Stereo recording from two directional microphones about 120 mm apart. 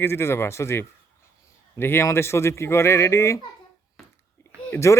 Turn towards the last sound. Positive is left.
turn(degrees=25)  # may be behind; listen again after turning